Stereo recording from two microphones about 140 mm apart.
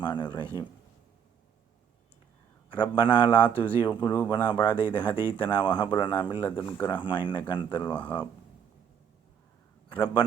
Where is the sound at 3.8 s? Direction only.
35° left (ahead or behind).